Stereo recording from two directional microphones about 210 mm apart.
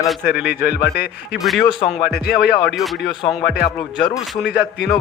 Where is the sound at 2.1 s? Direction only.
50° left (ahead or behind).